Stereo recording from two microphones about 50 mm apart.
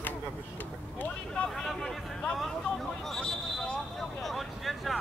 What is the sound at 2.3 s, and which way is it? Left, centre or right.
Hubbub, centre.